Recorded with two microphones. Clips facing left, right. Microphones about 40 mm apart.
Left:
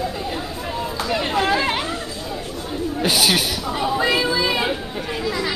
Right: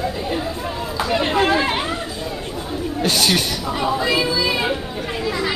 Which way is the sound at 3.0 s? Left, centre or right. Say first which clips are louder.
Even; centre.